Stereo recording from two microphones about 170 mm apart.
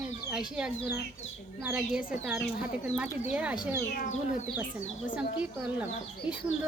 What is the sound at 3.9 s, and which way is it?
Speech, 45° left (ahead or behind).